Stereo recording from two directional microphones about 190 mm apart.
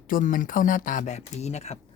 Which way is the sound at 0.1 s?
45° left (ahead or behind).